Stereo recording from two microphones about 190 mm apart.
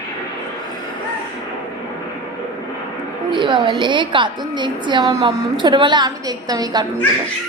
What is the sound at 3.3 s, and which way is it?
A woman's voice, 25° right (ahead or behind).